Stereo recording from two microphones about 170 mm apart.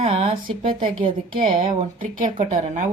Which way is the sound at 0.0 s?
35° right (ahead or behind).